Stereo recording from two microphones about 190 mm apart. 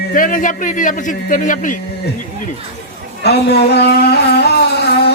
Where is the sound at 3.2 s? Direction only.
60° left (ahead or behind).